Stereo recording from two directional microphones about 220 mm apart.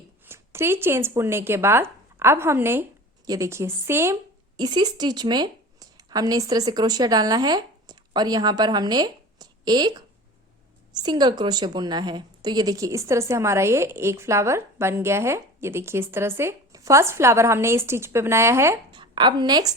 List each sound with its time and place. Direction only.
0.3 s a woman's voice: 10° right (ahead or behind)
11.0 s a woman's voice: 20° right (ahead or behind)